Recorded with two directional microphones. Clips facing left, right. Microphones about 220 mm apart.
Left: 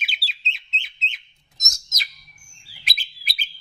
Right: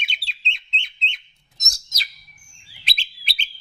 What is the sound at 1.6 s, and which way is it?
Bird, 30° right (ahead or behind).